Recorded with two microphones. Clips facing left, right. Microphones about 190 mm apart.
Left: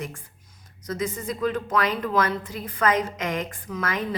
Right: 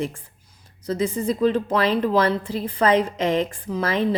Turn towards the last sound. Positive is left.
turn(degrees=-30)  # may be behind; listen again after turning